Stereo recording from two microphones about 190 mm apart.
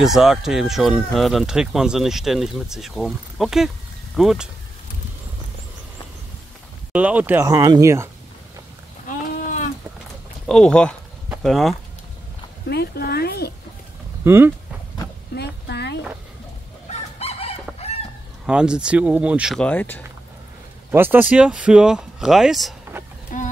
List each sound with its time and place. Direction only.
0.0 s speech: centre (ahead or behind)
6.9 s speech: 5° right (ahead or behind)
10.4 s speech: 5° left (ahead or behind)
11.2 s a sound: centre (ahead or behind)
12.6 s speech: 55° left (ahead or behind)
14.2 s speech: 10° right (ahead or behind)
15.3 s a sound: 60° left (ahead or behind)
16.9 s chicken: 30° left (ahead or behind)
18.5 s speech: 5° right (ahead or behind)
20.9 s speech: 10° right (ahead or behind)
23.3 s a sound: 45° left (ahead or behind)